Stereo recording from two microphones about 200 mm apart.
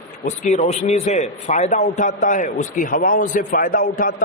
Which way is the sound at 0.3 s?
35° left (ahead or behind).